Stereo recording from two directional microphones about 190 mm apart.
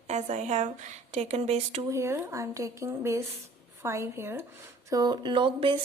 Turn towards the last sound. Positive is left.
turn(degrees=-25)  # may be behind; listen again after turning